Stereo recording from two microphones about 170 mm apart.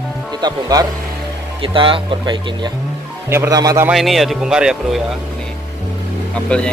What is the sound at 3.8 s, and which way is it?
Speech, centre (ahead or behind).